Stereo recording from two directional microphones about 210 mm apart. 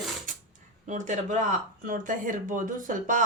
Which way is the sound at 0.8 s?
35° right (ahead or behind).